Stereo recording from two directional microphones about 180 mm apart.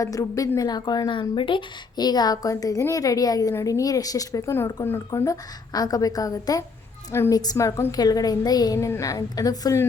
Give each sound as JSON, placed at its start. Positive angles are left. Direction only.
{"t": 0.0, "sound": "a woman's voice", "side_deg": 20}